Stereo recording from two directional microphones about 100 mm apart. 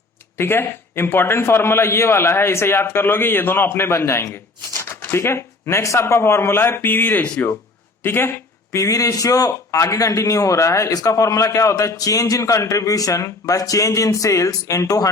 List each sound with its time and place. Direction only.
0.3 s a man's voice: 25° left (ahead or behind)
8.7 s a man's voice: 35° left (ahead or behind)